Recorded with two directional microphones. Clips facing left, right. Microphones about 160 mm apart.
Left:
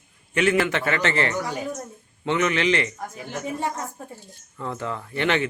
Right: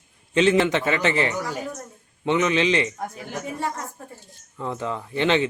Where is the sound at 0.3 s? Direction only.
20° right (ahead or behind).